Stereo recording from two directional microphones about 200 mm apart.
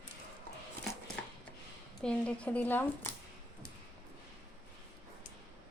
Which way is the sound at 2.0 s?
5° left (ahead or behind).